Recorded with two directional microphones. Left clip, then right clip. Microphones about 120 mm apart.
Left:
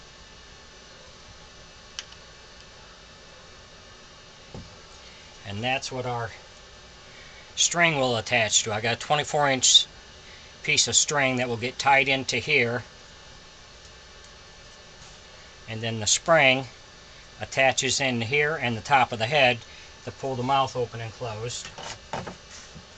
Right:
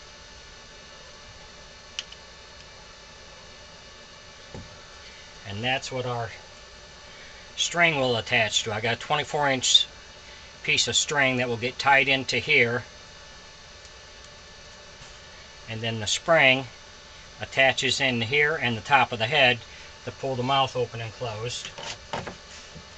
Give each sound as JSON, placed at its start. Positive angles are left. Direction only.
{"t": 5.5, "sound": "speech", "side_deg": 25}
{"t": 5.9, "sound": "speech", "side_deg": 10}
{"t": 7.6, "sound": "speech", "side_deg": 20}
{"t": 15.6, "sound": "speech", "side_deg": 25}